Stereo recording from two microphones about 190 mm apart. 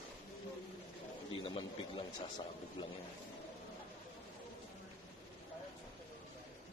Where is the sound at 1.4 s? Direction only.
25° left (ahead or behind).